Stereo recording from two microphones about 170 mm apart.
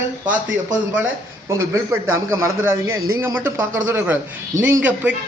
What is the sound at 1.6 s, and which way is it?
A man's voice, 20° right (ahead or behind).